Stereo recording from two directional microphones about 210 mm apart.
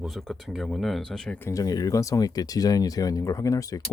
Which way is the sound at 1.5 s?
15° left (ahead or behind).